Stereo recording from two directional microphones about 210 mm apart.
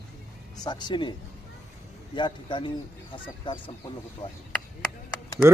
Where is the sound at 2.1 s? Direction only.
20° left (ahead or behind).